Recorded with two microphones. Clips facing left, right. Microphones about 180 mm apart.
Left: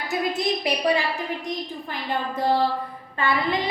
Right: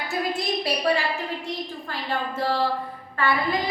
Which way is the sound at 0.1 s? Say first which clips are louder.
Left 3 dB; 20° left (ahead or behind).